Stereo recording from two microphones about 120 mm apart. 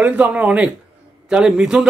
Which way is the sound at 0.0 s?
15° right (ahead or behind).